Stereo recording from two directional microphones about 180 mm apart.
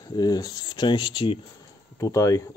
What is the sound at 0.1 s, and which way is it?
Speech, 20° left (ahead or behind).